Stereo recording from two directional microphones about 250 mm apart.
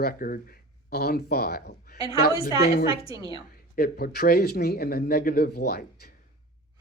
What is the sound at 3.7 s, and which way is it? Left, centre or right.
Speech, left.